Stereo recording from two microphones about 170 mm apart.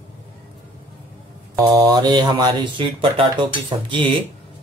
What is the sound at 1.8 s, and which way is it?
Speech, 25° right (ahead or behind).